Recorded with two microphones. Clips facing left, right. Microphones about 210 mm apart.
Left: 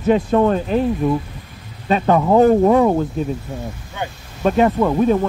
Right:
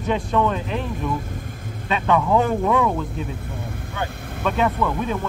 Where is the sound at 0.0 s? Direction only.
40° left (ahead or behind).